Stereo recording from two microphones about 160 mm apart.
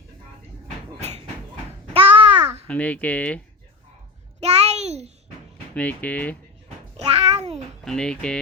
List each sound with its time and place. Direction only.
1.9 s babbling: 35° right (ahead or behind)
2.6 s speech: 10° left (ahead or behind)
4.4 s a sound: 40° right (ahead or behind)
5.7 s speech: 10° left (ahead or behind)
6.9 s a sound: 40° right (ahead or behind)
7.9 s speech: 5° left (ahead or behind)